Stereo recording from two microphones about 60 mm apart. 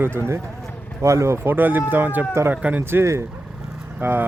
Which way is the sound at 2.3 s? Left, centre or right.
Right.